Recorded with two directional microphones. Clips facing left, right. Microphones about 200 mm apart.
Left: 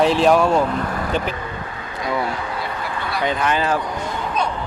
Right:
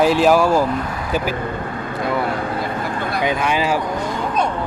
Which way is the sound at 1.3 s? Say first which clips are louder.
Right 5 dB; 50° right (ahead or behind).